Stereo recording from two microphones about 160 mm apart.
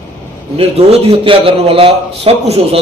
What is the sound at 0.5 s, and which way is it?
A man's voice, 35° right (ahead or behind).